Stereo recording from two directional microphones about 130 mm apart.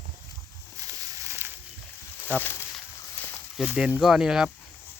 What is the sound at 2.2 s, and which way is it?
Speech, 15° left (ahead or behind).